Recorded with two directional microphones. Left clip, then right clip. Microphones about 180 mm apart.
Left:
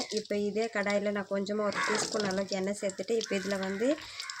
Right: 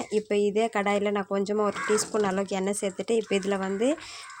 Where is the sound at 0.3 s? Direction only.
50° right (ahead or behind).